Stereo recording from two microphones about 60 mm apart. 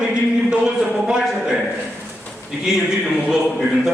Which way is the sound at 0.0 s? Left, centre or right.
Centre.